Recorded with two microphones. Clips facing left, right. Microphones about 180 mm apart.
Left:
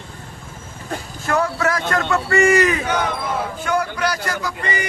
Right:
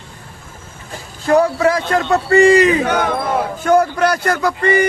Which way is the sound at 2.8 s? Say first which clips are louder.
Right 5 dB; 55° right (ahead or behind).